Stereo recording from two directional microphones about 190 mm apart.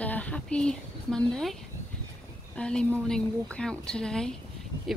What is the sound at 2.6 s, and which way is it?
Speech, 5° left (ahead or behind).